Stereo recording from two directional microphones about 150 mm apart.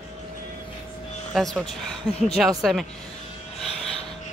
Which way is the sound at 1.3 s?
Centre (ahead or behind).